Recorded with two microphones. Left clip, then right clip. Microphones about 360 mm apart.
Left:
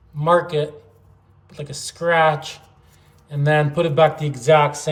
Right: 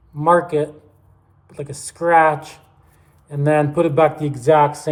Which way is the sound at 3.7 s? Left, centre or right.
Centre.